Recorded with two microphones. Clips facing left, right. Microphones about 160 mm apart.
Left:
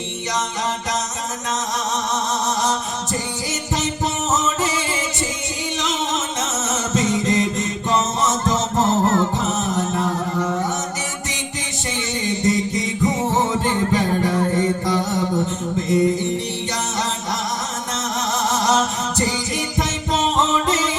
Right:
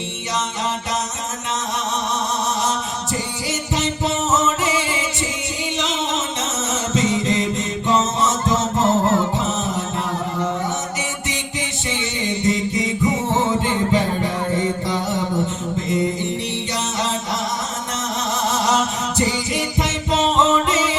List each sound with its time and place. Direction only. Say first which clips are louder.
4.6 s music: right 1 dB; 15° right (ahead or behind)
19.2 s music: right 3 dB; 15° right (ahead or behind)